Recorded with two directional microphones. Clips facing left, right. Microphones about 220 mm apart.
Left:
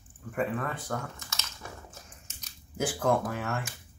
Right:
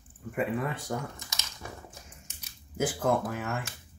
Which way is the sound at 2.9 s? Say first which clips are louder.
Left 3 dB; centre (ahead or behind).